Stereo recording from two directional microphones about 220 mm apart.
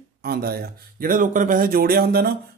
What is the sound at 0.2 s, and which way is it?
Speech, 45° right (ahead or behind).